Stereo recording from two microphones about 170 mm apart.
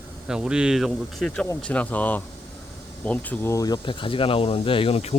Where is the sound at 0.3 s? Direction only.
5° right (ahead or behind).